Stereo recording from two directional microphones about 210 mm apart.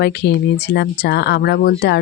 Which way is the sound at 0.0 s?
50° left (ahead or behind).